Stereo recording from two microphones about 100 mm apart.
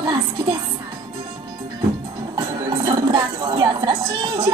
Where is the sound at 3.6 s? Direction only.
45° right (ahead or behind).